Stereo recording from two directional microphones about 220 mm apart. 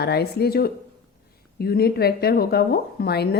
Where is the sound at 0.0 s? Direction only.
45° left (ahead or behind).